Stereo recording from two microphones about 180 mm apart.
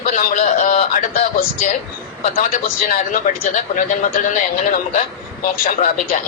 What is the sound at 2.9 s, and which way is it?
A man's voice, 45° left (ahead or behind).